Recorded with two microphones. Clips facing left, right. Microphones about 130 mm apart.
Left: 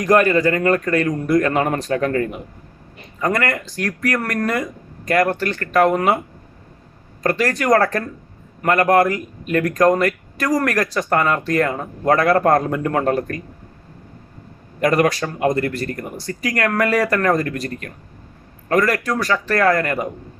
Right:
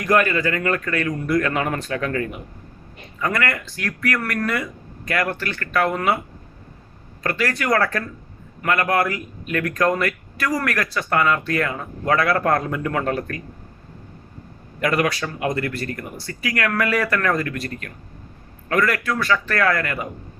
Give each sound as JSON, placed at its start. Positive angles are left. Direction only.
{"t": 0.0, "sound": "speech", "side_deg": 40}
{"t": 7.2, "sound": "speech", "side_deg": 40}
{"t": 14.8, "sound": "speech", "side_deg": 40}